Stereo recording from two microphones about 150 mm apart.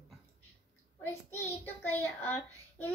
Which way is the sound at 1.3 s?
15° left (ahead or behind).